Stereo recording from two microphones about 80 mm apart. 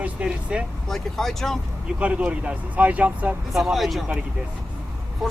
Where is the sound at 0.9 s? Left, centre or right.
Centre.